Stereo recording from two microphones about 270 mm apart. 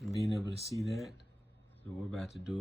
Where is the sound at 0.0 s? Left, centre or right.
Centre.